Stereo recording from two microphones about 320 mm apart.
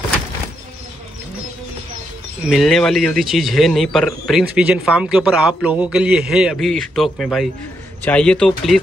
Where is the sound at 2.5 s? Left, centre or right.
Centre.